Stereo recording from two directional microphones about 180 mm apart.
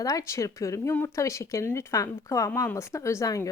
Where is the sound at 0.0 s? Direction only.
20° left (ahead or behind).